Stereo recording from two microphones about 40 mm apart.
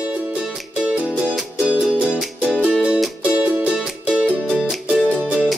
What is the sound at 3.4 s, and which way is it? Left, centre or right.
Music, right.